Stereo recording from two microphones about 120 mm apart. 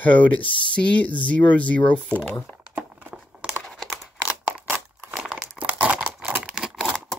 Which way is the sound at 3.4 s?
Centre (ahead or behind).